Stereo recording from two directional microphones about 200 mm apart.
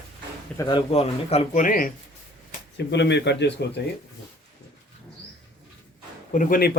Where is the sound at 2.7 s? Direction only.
60° left (ahead or behind).